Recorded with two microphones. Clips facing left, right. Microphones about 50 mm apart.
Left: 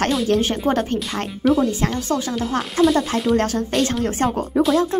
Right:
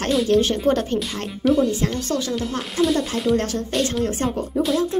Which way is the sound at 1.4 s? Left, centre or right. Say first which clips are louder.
Left 1 dB; centre.